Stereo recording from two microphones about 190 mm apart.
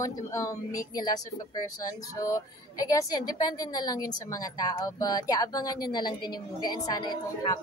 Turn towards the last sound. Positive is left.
turn(degrees=20)  # may be behind; listen again after turning